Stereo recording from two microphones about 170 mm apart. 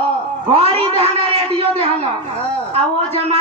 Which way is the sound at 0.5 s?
35° right (ahead or behind).